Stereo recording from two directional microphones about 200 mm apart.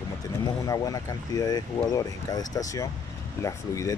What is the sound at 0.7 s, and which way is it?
Speech, 15° left (ahead or behind).